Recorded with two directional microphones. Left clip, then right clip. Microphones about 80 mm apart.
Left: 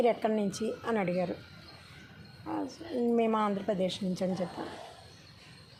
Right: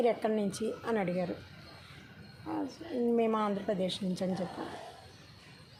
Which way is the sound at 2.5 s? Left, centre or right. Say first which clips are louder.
Left 1 dB; left.